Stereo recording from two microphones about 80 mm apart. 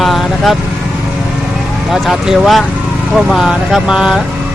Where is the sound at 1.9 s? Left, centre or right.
Centre.